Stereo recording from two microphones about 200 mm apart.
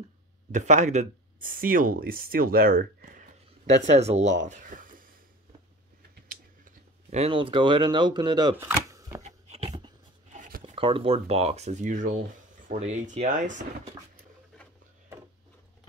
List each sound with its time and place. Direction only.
0.5 s speech: 40° right (ahead or behind)
6.6 s speech: 35° right (ahead or behind); by 9.2 s 15° right (ahead or behind)
9.2 s a sound: 35° right (ahead or behind)
10.6 s speech: 25° right (ahead or behind)